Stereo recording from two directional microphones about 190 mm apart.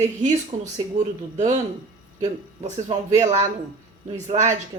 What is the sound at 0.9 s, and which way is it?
Speech, 40° right (ahead or behind).